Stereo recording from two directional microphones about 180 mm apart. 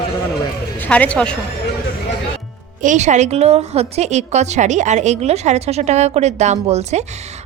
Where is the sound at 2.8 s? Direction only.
45° right (ahead or behind).